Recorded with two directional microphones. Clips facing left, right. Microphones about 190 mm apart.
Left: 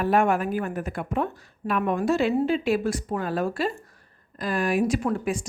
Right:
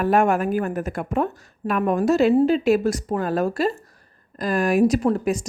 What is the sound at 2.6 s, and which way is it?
A woman's voice, 40° right (ahead or behind).